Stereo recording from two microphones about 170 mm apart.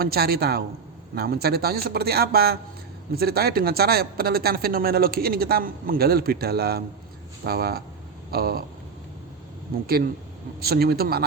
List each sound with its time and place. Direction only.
0.0 s a woman's voice: 65° right (ahead or behind)
9.7 s a woman's voice: 60° right (ahead or behind)